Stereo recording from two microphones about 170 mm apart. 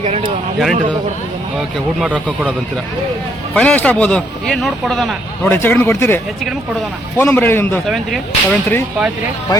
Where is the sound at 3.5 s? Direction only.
10° left (ahead or behind).